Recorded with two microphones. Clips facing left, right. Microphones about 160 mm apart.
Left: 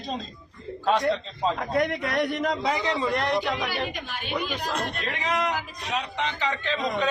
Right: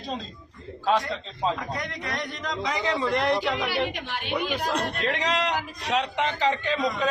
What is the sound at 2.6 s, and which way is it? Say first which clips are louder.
Speech: left 1 dB; 30° left (ahead or behind).